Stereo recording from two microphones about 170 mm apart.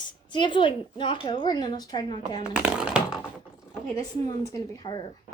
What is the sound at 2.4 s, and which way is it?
Speech, 5° right (ahead or behind).